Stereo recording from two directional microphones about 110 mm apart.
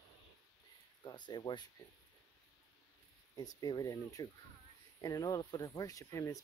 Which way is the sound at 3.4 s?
35° left (ahead or behind).